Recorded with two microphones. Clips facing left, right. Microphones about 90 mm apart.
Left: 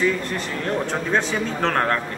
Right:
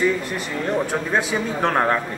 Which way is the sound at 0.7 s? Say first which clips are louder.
Right 1 dB; 5° right (ahead or behind).